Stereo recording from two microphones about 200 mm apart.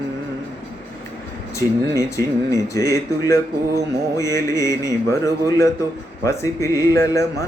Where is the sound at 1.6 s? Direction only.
15° left (ahead or behind).